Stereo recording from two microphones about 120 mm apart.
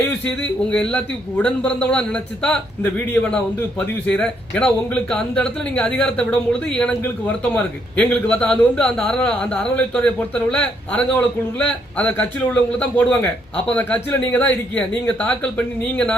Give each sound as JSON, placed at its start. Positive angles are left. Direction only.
{"t": 0.0, "sound": "a man's voice", "side_deg": 10}